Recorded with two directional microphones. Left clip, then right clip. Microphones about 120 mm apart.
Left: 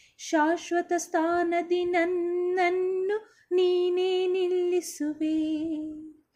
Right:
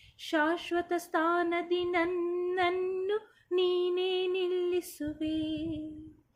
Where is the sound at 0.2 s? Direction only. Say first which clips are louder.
Left 4 dB; 45° left (ahead or behind).